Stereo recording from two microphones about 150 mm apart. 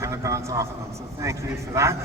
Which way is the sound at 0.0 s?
20° right (ahead or behind).